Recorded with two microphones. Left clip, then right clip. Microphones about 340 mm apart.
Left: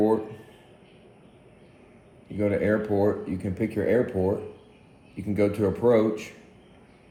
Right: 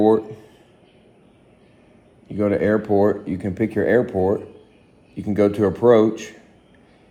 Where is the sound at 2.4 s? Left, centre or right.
Right.